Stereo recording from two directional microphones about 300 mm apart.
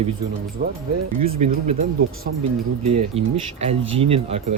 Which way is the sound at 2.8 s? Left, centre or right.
Right.